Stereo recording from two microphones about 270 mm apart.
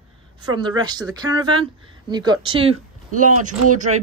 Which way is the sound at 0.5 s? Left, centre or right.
Centre.